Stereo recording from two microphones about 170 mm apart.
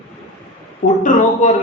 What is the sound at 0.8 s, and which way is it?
Speech, 50° left (ahead or behind).